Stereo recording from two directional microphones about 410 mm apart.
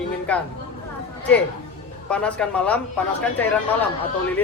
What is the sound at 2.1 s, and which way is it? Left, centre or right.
Speech, centre.